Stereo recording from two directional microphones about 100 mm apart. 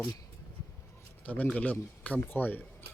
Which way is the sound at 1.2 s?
15° left (ahead or behind).